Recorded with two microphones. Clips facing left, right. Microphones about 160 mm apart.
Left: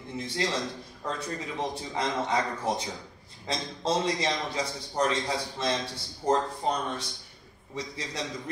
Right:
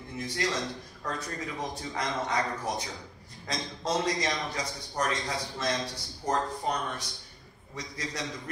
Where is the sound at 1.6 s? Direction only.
25° left (ahead or behind).